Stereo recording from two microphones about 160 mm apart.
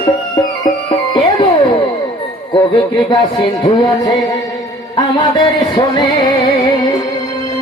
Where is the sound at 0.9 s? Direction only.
35° left (ahead or behind).